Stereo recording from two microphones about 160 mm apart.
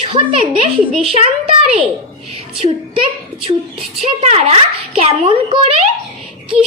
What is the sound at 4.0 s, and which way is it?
A woman's voice, 40° right (ahead or behind).